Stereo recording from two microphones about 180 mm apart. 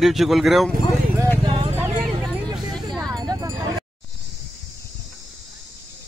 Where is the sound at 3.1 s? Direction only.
20° right (ahead or behind).